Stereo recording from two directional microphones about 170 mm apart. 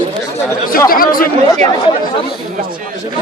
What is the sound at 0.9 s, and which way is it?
Speech, 55° left (ahead or behind).